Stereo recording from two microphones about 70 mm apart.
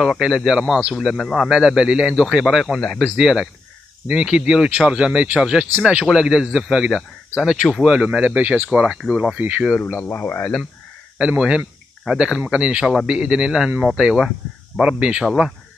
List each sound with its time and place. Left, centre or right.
0.0 s speech: centre
0.9 s speech: centre
1.5 s speech: centre
9.4 s speech: right
10.0 s speech: left
11.1 s speech: centre